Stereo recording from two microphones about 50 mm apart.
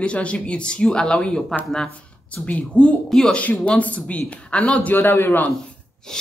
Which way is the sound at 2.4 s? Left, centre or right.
Left.